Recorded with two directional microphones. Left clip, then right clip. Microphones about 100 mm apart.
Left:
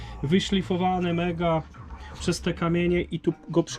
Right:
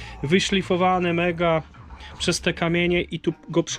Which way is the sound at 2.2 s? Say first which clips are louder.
Right 5 dB; 20° left (ahead or behind).